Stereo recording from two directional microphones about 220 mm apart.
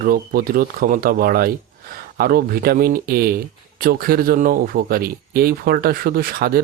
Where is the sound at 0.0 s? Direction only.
40° right (ahead or behind).